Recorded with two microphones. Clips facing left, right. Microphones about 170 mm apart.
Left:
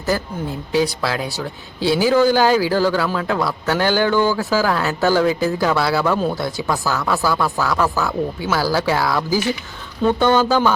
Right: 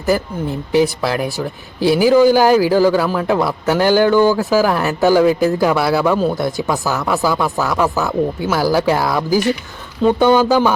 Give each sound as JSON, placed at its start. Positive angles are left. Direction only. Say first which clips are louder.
{"t": 0.7, "sound": "speech", "louder": "right 4 dB", "side_deg": -15}
{"t": 5.5, "sound": "speech", "louder": "right 3 dB", "side_deg": -15}